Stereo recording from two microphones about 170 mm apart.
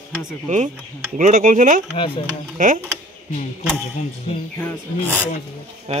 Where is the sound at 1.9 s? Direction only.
30° left (ahead or behind).